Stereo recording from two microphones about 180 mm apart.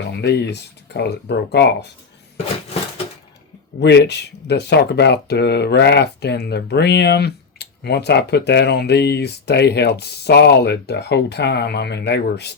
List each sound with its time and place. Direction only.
0.1 s speech: 70° left (ahead or behind)
3.8 s speech: 70° left (ahead or behind)